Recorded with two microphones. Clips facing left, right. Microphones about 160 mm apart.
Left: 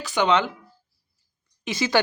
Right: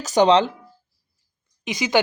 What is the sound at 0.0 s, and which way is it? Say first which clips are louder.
Speech: right 5 dB; 40° right (ahead or behind).